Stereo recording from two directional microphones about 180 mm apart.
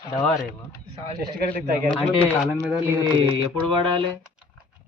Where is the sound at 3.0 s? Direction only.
25° right (ahead or behind).